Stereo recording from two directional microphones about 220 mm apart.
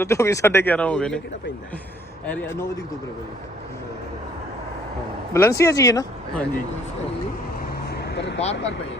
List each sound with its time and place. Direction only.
0.0 s speech: 15° left (ahead or behind)
2.2 s speech: 5° left (ahead or behind)
5.3 s speech: 15° left (ahead or behind)
7.9 s vehicle: 50° left (ahead or behind)